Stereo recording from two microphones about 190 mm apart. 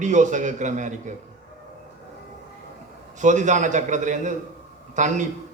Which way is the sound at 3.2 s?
40° right (ahead or behind).